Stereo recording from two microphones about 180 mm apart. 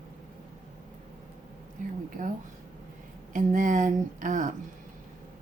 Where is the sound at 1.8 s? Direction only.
45° right (ahead or behind).